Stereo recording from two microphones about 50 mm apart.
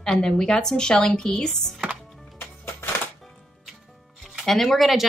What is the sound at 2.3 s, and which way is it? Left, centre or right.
Music, left.